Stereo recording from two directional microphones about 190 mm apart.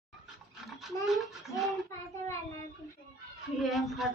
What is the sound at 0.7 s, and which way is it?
Toothbrush, centre (ahead or behind).